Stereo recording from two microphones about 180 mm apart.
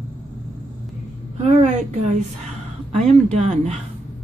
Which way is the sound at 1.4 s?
40° right (ahead or behind).